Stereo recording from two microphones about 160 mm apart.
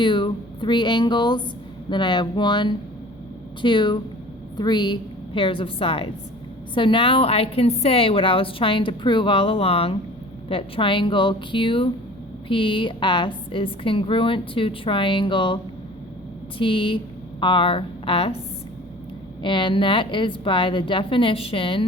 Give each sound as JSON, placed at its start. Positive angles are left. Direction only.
{"t": 0.0, "sound": "a sound", "side_deg": 30}
{"t": 1.9, "sound": "a woman's voice", "side_deg": 30}
{"t": 19.4, "sound": "a woman's voice", "side_deg": 30}